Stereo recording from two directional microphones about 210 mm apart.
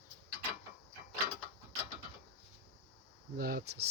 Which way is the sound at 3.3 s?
45° right (ahead or behind).